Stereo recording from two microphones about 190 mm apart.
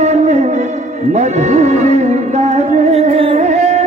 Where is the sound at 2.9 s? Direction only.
35° right (ahead or behind).